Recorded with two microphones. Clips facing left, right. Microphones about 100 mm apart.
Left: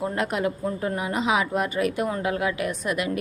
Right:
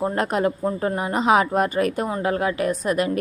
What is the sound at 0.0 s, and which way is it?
A woman's voice, 40° right (ahead or behind).